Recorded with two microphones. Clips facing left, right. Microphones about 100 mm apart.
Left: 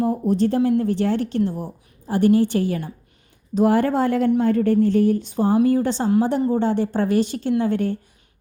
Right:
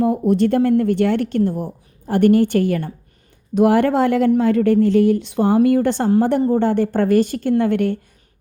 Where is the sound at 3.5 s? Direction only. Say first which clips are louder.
Right 3 dB; 75° right (ahead or behind).